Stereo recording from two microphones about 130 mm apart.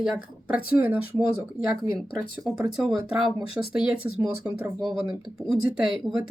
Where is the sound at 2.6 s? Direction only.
Centre (ahead or behind).